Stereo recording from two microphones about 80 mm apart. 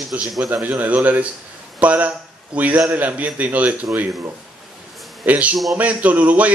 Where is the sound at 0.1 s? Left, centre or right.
Right.